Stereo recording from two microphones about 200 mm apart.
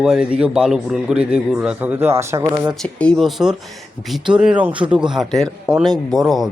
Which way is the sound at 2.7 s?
5° left (ahead or behind).